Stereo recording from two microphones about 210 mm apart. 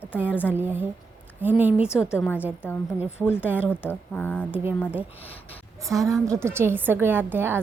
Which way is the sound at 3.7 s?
10° left (ahead or behind).